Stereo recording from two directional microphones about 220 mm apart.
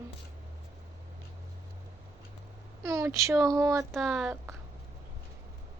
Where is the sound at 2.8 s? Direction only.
10° right (ahead or behind).